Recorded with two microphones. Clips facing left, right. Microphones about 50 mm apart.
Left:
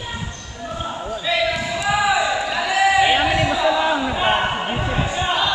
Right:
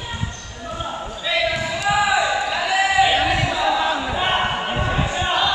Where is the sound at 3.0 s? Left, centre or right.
Centre.